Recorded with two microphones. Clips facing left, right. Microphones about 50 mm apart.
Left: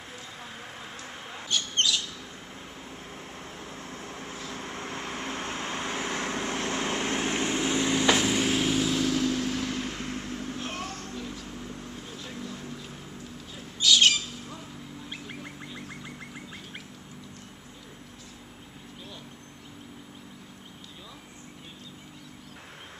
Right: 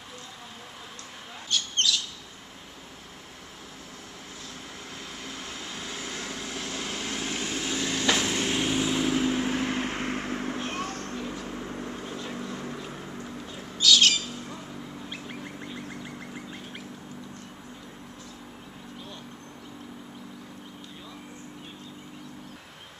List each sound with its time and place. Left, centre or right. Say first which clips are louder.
1.5 s bird: even; left
4.5 s vehicle: left 6 dB; left; by 10.6 s right
10.6 s a sound: right 3 dB; centre
11.1 s vehicle: right 3 dB; centre
11.4 s vehicle: right 4 dB; right
13.7 s squawk: even; left